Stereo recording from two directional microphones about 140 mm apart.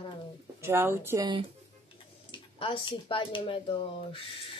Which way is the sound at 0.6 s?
15° right (ahead or behind).